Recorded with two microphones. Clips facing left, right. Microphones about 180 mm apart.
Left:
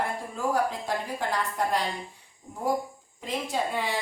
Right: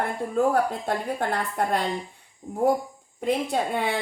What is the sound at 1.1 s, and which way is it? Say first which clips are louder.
Speech: right 3 dB; 55° right (ahead or behind).